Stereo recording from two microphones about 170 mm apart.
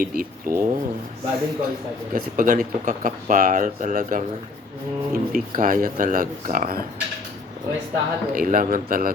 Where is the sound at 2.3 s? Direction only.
50° right (ahead or behind).